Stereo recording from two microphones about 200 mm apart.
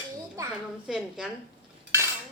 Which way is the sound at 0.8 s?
5° right (ahead or behind).